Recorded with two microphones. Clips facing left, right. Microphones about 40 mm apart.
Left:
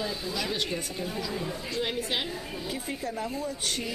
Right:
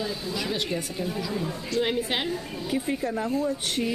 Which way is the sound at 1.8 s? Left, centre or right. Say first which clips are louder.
Right 5 dB; centre.